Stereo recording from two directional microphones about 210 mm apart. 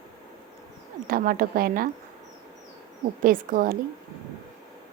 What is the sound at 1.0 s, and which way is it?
Speech, 40° right (ahead or behind).